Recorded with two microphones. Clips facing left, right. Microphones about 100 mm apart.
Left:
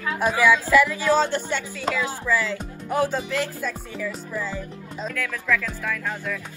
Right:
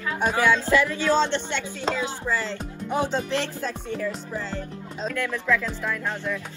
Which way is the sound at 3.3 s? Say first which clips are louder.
Even; 30° right (ahead or behind).